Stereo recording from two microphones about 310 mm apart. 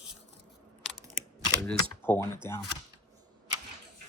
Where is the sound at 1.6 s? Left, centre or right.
Centre.